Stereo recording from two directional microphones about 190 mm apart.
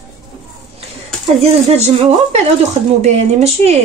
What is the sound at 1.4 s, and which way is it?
Speech, 35° right (ahead or behind).